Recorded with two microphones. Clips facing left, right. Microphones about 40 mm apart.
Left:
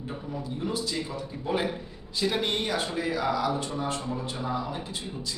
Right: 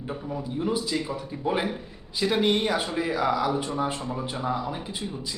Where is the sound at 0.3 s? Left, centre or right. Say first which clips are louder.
Right 4 dB; centre.